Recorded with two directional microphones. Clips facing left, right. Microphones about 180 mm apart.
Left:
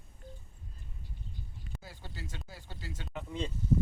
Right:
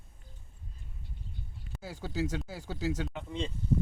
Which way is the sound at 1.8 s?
85° right.